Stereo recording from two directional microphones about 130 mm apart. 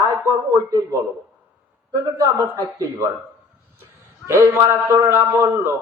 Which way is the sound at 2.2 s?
25° right (ahead or behind).